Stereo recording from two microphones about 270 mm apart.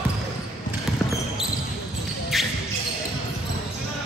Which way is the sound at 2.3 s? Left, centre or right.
Centre.